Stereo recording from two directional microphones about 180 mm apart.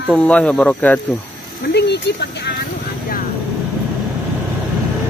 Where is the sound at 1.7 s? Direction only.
65° left (ahead or behind).